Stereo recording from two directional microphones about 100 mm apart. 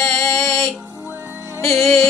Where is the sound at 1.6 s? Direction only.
25° left (ahead or behind).